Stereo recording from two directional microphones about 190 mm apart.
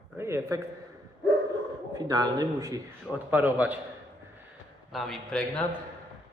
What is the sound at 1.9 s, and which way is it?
A man's voice, 20° right (ahead or behind).